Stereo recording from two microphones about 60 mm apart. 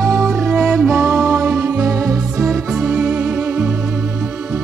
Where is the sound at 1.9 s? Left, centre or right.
Centre.